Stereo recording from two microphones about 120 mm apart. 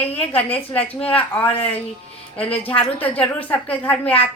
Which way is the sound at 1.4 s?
55° left (ahead or behind).